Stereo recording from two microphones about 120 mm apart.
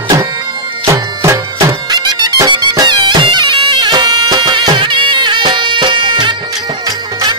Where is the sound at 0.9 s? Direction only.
25° right (ahead or behind).